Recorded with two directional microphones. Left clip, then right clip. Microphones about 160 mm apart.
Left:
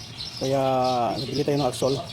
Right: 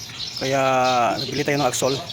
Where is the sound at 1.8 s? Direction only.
15° right (ahead or behind).